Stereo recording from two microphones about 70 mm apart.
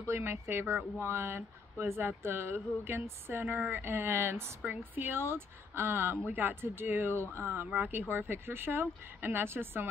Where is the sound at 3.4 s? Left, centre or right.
Right.